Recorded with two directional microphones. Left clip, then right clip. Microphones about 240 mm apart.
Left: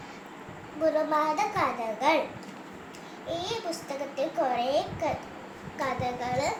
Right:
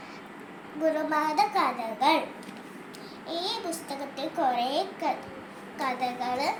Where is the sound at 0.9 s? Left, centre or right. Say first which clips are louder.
Right 1 dB; centre.